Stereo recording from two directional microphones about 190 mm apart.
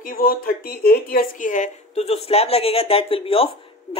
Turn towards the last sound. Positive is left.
turn(degrees=30)  # may be behind; listen again after turning